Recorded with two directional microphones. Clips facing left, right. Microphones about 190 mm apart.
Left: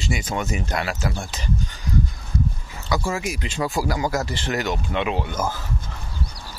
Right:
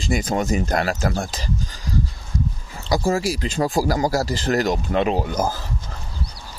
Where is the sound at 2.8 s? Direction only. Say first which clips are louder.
Right 5 dB; 35° right (ahead or behind).